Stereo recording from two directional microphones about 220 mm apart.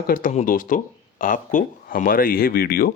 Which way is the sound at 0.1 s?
40° left (ahead or behind).